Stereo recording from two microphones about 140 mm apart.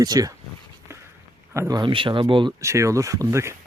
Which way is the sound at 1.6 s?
25° right (ahead or behind).